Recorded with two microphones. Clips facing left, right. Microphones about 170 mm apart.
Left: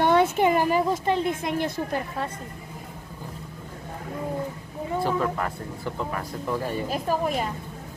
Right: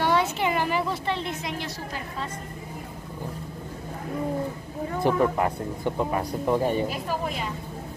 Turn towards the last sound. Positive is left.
turn(degrees=45)  # may be behind; listen again after turning